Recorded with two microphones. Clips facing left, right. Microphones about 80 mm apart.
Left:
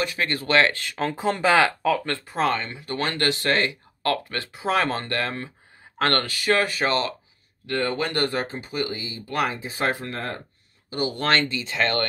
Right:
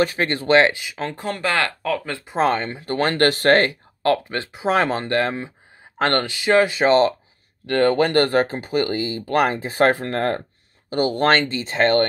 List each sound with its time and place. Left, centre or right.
0.0 s speech: right
0.7 s speech: centre
1.0 s speech: centre
2.0 s speech: centre
2.2 s speech: right
4.0 s speech: right
7.6 s speech: right
10.9 s speech: right